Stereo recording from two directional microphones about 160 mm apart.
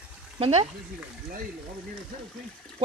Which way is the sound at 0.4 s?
40° right (ahead or behind).